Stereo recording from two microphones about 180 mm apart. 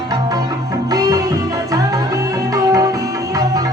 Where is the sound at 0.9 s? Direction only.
20° right (ahead or behind).